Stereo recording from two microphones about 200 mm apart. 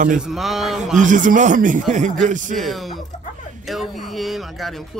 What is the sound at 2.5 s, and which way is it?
Speech, centre (ahead or behind).